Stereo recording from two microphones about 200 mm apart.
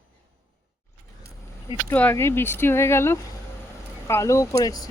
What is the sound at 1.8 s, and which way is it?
Speech, 10° left (ahead or behind).